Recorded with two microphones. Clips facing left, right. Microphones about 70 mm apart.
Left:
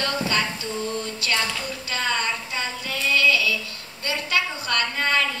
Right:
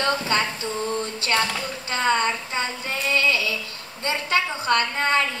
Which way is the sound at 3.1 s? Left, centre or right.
Right.